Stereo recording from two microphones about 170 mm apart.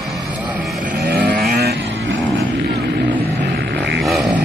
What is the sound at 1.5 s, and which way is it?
Vehicle, 65° right (ahead or behind).